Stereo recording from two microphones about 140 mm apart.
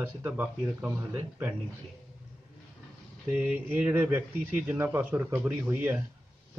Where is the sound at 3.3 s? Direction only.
10° right (ahead or behind).